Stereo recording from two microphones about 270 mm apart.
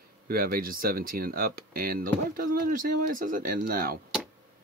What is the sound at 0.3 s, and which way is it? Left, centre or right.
Speech, right.